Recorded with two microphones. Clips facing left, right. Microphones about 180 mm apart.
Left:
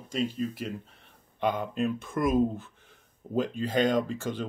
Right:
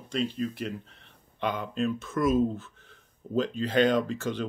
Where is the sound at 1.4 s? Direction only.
45° left (ahead or behind).